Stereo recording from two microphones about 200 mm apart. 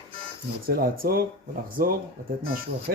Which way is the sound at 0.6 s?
45° right (ahead or behind).